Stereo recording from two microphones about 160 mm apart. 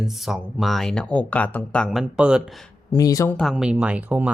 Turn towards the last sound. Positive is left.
turn(degrees=-10)  # may be behind; listen again after turning